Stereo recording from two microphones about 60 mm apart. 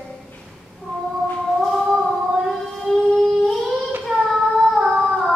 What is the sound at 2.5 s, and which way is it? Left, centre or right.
Siren, centre.